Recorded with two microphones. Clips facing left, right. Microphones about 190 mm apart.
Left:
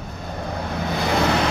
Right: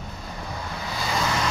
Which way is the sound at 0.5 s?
60° left (ahead or behind).